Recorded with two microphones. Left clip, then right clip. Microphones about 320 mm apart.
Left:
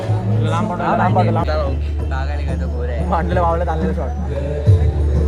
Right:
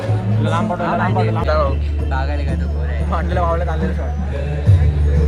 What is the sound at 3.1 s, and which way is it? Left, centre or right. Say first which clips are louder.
Speech: left 2 dB; left.